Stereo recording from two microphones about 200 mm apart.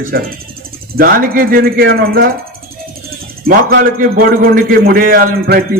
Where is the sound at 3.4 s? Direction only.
50° right (ahead or behind).